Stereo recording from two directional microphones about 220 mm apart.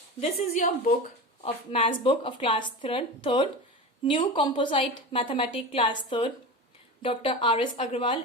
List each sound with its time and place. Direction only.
0.2 s a woman's voice: 30° left (ahead or behind)